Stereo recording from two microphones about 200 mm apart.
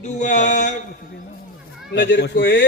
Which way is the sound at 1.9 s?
60° left (ahead or behind).